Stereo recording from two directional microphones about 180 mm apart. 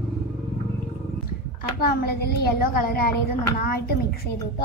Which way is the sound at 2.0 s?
60° left (ahead or behind).